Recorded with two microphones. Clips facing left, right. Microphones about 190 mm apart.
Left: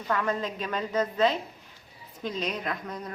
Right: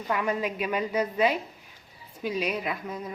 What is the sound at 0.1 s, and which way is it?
A woman's voice, 10° right (ahead or behind).